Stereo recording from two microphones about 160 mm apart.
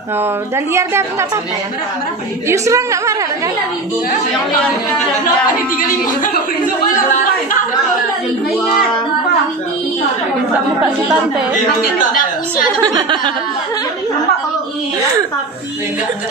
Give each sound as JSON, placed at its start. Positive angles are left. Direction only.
{"t": 0.7, "sound": "a woman's voice", "side_deg": -20}
{"t": 2.4, "sound": "a woman's voice", "side_deg": -20}
{"t": 5.8, "sound": "speech", "side_deg": 60}
{"t": 12.8, "sound": "a woman's voice", "side_deg": -25}